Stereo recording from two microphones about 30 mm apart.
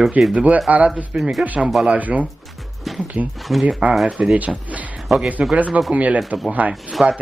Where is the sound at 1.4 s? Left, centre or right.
Right.